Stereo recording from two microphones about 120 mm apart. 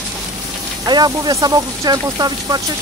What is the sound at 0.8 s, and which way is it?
Speech, 35° right (ahead or behind).